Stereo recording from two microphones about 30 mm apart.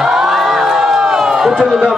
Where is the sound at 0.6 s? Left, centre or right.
Centre.